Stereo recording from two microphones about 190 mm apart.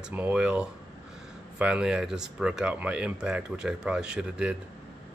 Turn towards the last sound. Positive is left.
turn(degrees=-5)  # may be behind; listen again after turning